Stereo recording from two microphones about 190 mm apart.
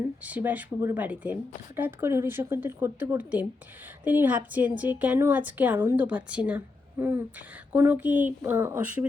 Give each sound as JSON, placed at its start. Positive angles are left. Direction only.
{"t": 0.3, "sound": "speech", "side_deg": -10}